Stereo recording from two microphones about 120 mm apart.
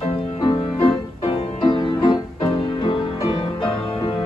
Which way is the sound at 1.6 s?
40° left (ahead or behind).